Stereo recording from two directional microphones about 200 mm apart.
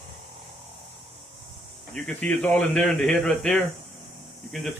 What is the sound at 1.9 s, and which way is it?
Speech, 5° left (ahead or behind).